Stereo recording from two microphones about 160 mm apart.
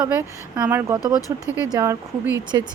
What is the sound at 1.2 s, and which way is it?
Speech, 20° left (ahead or behind).